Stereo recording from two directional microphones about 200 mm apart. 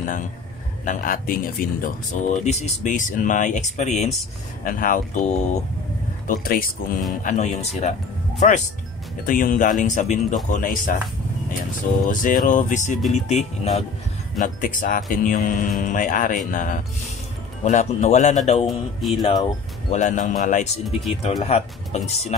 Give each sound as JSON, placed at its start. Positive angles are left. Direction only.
{"t": 0.0, "sound": "a man's voice", "side_deg": 40}
{"t": 12.1, "sound": "speech", "side_deg": 40}
{"t": 18.7, "sound": "speech", "side_deg": 0}
{"t": 19.9, "sound": "speech", "side_deg": 40}